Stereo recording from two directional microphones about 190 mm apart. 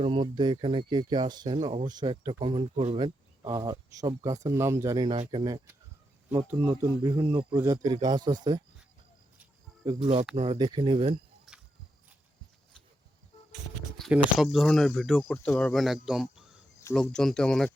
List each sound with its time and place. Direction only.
0.0 s speech: 25° right (ahead or behind)
6.3 s speech: 10° right (ahead or behind)
10.0 s speech: 35° right (ahead or behind)
11.5 s cricket: centre (ahead or behind)
14.0 s speech: centre (ahead or behind)